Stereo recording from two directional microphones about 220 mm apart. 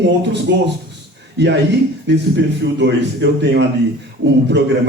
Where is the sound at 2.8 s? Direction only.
55° right (ahead or behind).